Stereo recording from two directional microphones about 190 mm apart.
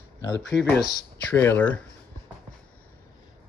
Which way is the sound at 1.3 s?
10° left (ahead or behind).